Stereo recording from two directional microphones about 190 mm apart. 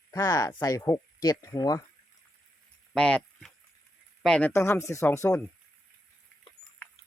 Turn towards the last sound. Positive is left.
turn(degrees=15)  # may be behind; listen again after turning